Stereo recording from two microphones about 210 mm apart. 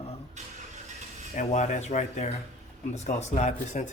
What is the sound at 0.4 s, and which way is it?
Vehicle, 35° right (ahead or behind).